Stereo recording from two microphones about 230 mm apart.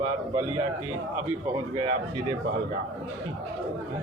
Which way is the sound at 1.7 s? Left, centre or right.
Right.